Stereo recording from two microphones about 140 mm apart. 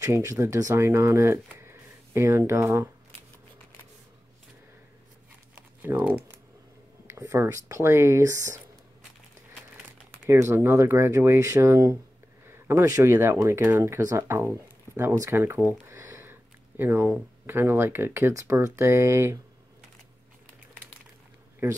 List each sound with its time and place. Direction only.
0.0 s speech: 20° right (ahead or behind)
5.5 s crumpling: 10° right (ahead or behind)
7.1 s speech: 20° right (ahead or behind)
10.2 s speech: 20° right (ahead or behind)